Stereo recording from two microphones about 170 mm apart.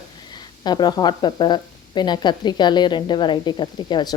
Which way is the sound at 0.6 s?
25° left (ahead or behind).